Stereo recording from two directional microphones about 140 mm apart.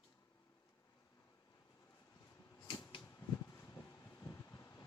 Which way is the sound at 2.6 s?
35° left (ahead or behind).